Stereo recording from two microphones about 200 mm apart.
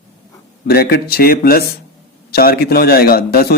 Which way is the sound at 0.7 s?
50° left (ahead or behind).